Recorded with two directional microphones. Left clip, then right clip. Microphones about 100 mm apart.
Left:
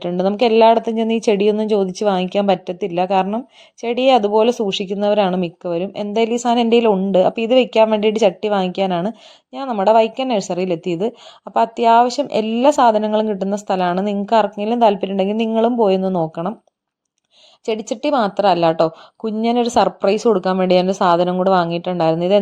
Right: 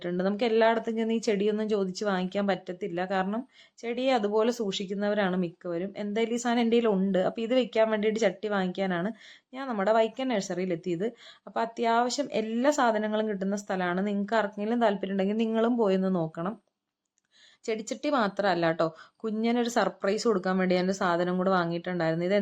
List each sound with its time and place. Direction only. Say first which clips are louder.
0.0 s a woman's voice: left 12 dB; 40° left (ahead or behind)
3.8 s speech: left 13 dB; 50° left (ahead or behind)
4.3 s a woman's voice: left 11 dB; 35° left (ahead or behind)
4.7 s a woman's voice: left 12 dB; 45° left (ahead or behind)
13.9 s a woman's voice: left 11 dB; 15° right (ahead or behind)
14.7 s a woman's voice: left 12 dB; 35° left (ahead or behind)
17.7 s a woman's voice: left 10 dB; 35° left (ahead or behind)